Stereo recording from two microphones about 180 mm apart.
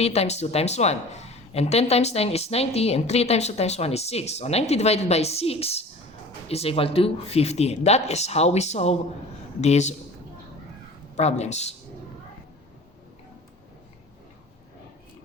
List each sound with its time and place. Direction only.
0.0 s a woman's voice: 35° left (ahead or behind)
11.2 s a woman's voice: 40° left (ahead or behind)